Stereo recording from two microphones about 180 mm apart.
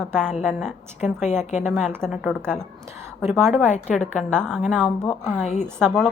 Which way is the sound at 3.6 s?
40° left (ahead or behind).